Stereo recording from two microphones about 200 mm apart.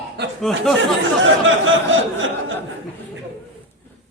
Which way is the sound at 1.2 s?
75° right (ahead or behind).